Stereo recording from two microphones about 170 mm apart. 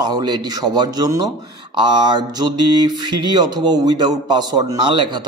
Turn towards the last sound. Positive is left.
turn(degrees=-25)  # may be behind; listen again after turning